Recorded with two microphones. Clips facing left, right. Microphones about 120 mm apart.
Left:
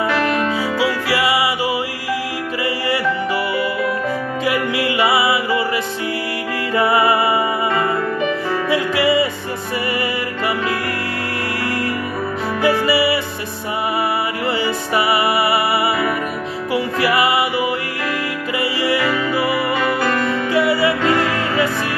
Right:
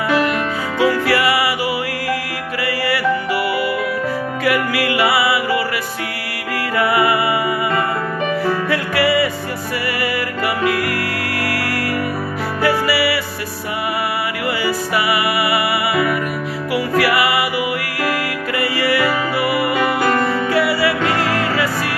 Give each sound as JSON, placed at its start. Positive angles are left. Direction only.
{"t": 0.7, "sound": "music", "side_deg": 15}
{"t": 4.5, "sound": "music", "side_deg": 20}
{"t": 6.7, "sound": "music", "side_deg": 25}
{"t": 8.6, "sound": "music", "side_deg": 15}
{"t": 12.6, "sound": "music", "side_deg": 20}
{"t": 15.0, "sound": "music", "side_deg": 25}
{"t": 16.7, "sound": "music", "side_deg": 25}
{"t": 18.6, "sound": "music", "side_deg": 15}
{"t": 20.5, "sound": "music", "side_deg": 20}